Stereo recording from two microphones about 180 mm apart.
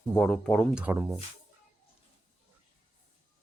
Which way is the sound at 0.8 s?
5° right (ahead or behind).